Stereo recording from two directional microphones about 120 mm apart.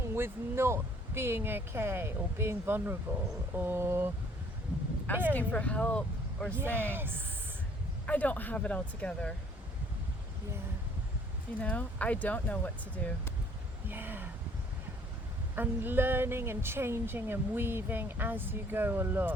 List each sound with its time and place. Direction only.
0.0 s speech: 20° right (ahead or behind)
5.3 s speech: 10° left (ahead or behind)
6.7 s speech: 20° right (ahead or behind)
8.0 s speech: 10° left (ahead or behind)
11.6 s speech: 10° left (ahead or behind)
13.8 s speech: 15° right (ahead or behind)
15.5 s speech: 15° right (ahead or behind)